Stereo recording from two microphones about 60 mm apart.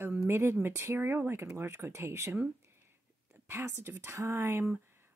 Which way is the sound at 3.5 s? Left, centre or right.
Right.